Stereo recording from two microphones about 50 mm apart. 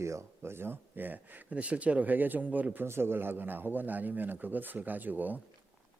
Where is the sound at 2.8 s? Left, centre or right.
Right.